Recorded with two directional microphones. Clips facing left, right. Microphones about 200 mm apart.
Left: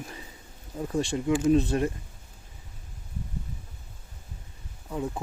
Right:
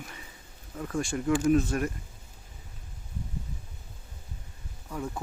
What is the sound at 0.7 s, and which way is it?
Speech, 20° left (ahead or behind).